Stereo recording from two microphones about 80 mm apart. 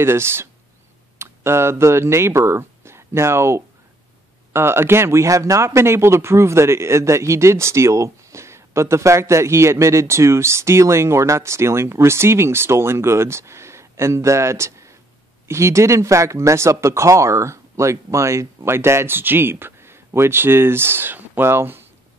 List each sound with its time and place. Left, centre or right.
0.0 s speech: right